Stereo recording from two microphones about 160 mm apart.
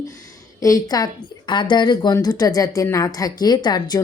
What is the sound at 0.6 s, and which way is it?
Speech, 25° left (ahead or behind).